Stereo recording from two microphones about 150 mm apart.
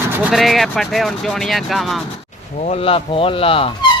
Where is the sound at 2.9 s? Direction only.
40° left (ahead or behind).